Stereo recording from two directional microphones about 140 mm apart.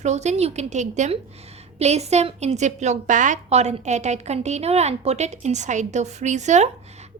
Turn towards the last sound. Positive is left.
turn(degrees=-55)  # may be behind; listen again after turning